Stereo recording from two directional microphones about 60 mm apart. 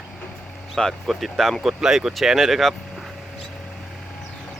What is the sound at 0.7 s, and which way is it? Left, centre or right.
Speech, centre.